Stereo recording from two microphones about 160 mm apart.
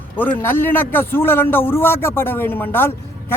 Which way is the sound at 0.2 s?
10° left (ahead or behind).